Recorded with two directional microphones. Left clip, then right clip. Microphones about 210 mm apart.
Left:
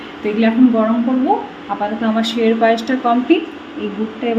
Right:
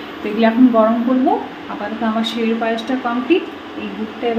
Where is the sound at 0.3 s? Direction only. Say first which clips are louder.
Right 2 dB; 10° left (ahead or behind).